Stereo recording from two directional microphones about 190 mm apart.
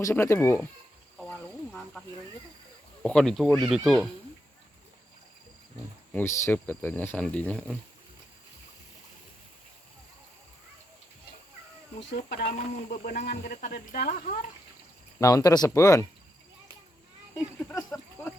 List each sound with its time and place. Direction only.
0.0 s speech: 15° left (ahead or behind)
1.2 s a sound: 5° left (ahead or behind)
3.0 s speech: 5° left (ahead or behind)
6.1 s speech: 10° left (ahead or behind)
11.9 s speech: 60° left (ahead or behind)
15.2 s speech: 20° left (ahead or behind)
17.6 s speech: 10° left (ahead or behind)